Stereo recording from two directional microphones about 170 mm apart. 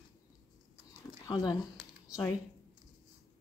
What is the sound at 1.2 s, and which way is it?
Speech, 25° left (ahead or behind).